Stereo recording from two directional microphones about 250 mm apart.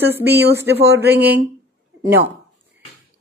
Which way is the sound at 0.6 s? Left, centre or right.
Right.